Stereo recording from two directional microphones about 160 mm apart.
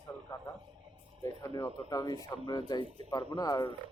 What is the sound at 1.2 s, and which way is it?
Speech, 20° left (ahead or behind).